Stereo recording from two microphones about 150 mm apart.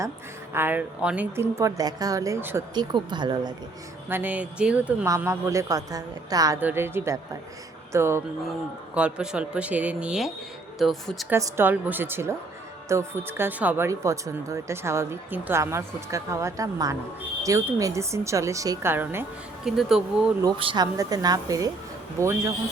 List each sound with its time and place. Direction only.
0.5 s a woman's voice: 15° right (ahead or behind)
2.7 s speech: 30° right (ahead or behind)
4.1 s a woman's voice: 10° right (ahead or behind)
5.0 s speech: 20° right (ahead or behind)
6.6 s a woman's voice: 15° right (ahead or behind)
11.3 s a woman's voice: 20° right (ahead or behind)
19.6 s speech: 5° right (ahead or behind)
20.6 s speech: 35° right (ahead or behind)
20.8 s speech: 25° right (ahead or behind)